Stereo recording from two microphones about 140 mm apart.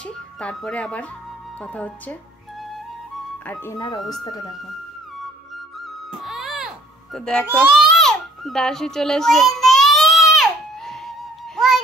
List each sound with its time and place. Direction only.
0.0 s a sound: 5° left (ahead or behind)
1.6 s speech: 10° left (ahead or behind)
3.4 s speech: 15° left (ahead or behind)
3.7 s speech: 30° left (ahead or behind)
5.8 s music: centre (ahead or behind)
7.7 s baby cry: centre (ahead or behind)